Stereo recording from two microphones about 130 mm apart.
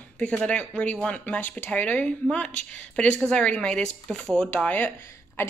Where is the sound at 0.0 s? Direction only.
10° left (ahead or behind).